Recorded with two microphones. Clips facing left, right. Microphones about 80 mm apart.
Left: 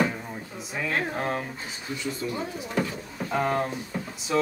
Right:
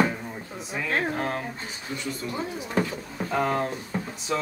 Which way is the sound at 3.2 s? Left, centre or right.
Centre.